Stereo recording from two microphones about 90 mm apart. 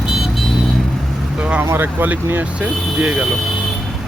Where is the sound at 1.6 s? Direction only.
25° right (ahead or behind).